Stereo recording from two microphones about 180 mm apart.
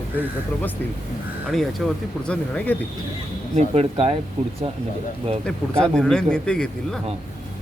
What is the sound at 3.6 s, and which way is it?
Speech, 35° right (ahead or behind).